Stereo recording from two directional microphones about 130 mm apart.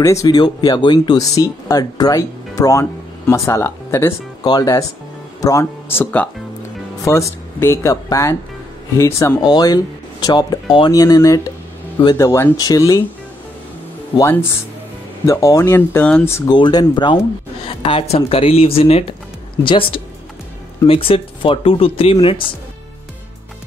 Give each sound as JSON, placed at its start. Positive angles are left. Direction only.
{"t": 0.0, "sound": "speech", "side_deg": 25}
{"t": 15.2, "sound": "speech", "side_deg": 25}
{"t": 16.4, "sound": "speech", "side_deg": 35}
{"t": 17.6, "sound": "speech", "side_deg": 45}